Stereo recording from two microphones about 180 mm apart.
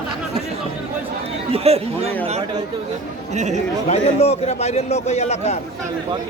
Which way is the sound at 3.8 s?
35° left (ahead or behind).